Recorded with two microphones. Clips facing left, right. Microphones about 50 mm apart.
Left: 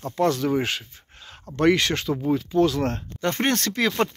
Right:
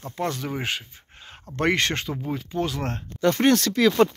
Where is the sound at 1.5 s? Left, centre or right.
Right.